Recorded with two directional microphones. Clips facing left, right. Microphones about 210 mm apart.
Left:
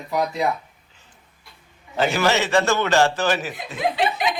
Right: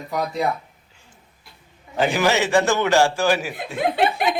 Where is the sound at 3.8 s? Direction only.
55° right (ahead or behind).